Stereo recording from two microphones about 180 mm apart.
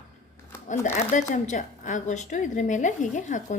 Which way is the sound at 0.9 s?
45° left (ahead or behind).